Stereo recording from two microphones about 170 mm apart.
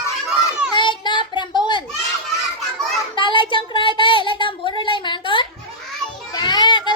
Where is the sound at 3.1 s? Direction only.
30° left (ahead or behind).